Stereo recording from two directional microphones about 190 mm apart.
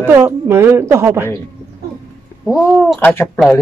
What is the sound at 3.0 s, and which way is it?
Speech, 10° left (ahead or behind).